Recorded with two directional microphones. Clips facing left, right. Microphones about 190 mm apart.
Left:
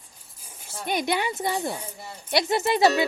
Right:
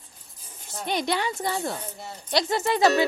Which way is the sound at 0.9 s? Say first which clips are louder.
Left 1 dB; 10° left (ahead or behind).